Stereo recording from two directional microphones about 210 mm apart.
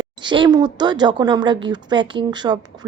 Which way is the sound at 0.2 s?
20° right (ahead or behind).